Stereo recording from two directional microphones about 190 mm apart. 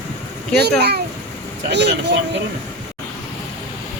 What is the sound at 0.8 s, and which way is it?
A child's voice, 60° right (ahead or behind).